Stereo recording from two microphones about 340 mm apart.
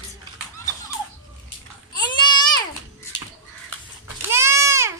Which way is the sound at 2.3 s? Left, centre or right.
Centre.